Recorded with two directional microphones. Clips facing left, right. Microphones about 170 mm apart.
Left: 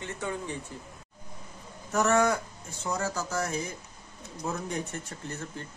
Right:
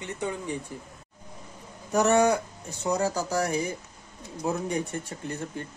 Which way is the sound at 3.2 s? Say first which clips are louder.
Right 4 dB; 35° right (ahead or behind).